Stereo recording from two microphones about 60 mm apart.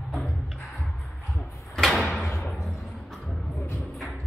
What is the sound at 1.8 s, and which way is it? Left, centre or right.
Door, centre.